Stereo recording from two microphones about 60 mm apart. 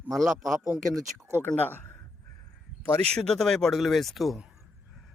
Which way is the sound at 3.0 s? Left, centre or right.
Centre.